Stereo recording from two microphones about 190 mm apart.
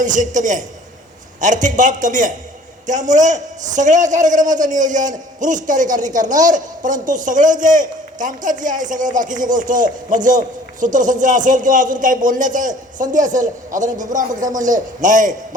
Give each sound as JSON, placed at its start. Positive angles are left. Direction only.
{"t": 0.0, "sound": "a man's voice", "side_deg": -40}